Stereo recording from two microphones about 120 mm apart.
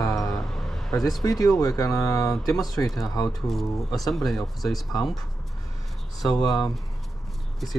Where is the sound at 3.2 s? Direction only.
Centre (ahead or behind).